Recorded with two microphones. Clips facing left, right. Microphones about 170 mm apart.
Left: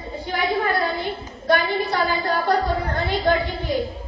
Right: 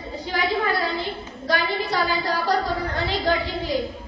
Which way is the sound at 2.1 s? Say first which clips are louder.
Left 2 dB; 50° left (ahead or behind).